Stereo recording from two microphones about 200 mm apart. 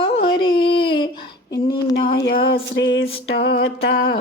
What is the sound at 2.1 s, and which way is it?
Music, 60° left (ahead or behind).